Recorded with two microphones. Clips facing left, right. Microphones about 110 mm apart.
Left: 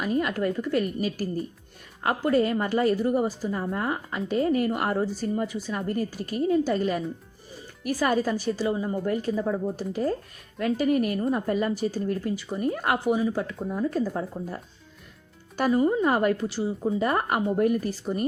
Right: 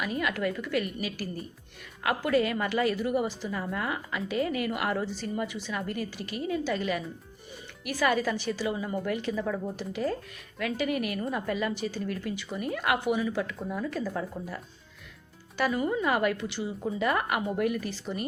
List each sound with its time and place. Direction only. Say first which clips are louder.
0.0 s a woman's voice: left 4 dB; 40° left (ahead or behind)
9.3 s speech: left 4 dB; 25° left (ahead or behind)
9.7 s a woman's voice: left 4 dB; 40° left (ahead or behind)
15.5 s a woman's voice: left 5 dB; 40° left (ahead or behind)